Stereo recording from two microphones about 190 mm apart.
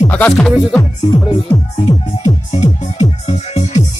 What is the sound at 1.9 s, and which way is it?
Music, 30° left (ahead or behind).